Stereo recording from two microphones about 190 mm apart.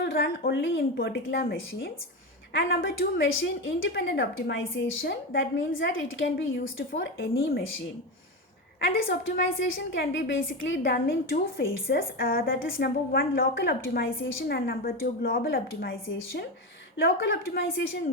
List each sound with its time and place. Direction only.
0.0 s a woman's voice: 55° left (ahead or behind)
2.5 s a woman's voice: 80° left
6.9 s a woman's voice: 70° left (ahead or behind)
8.8 s a woman's voice: 50° left (ahead or behind)
9.6 s a woman's voice: 90° left
10.0 s a woman's voice: 70° left (ahead or behind); by 14.2 s 50° left (ahead or behind)
14.2 s a woman's voice: 90° left
14.4 s a woman's voice: 50° left (ahead or behind)